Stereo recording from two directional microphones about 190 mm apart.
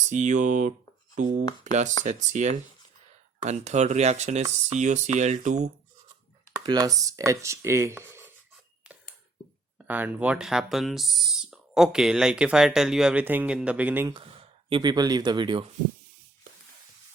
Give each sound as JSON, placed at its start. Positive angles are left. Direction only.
{"t": 0.1, "sound": "speech", "side_deg": -40}
{"t": 6.7, "sound": "speech", "side_deg": -20}
{"t": 9.8, "sound": "speech", "side_deg": -10}
{"t": 14.7, "sound": "speech", "side_deg": -20}